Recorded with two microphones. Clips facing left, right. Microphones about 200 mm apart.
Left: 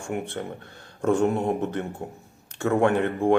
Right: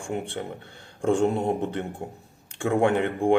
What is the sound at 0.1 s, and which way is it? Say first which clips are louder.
Speech: even; 25° right (ahead or behind).